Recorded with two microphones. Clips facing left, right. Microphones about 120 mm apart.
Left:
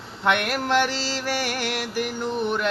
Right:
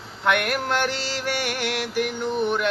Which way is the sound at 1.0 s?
35° left (ahead or behind).